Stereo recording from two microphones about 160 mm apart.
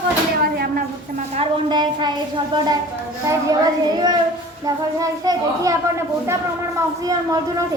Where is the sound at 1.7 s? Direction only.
30° right (ahead or behind).